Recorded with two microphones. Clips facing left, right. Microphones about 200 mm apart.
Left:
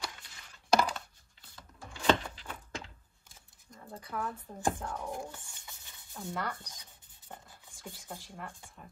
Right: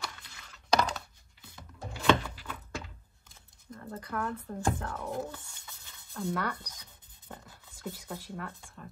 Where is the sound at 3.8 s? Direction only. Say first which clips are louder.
Right 3 dB; 10° left (ahead or behind).